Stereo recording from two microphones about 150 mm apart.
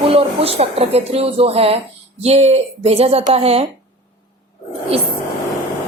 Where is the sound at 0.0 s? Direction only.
40° right (ahead or behind).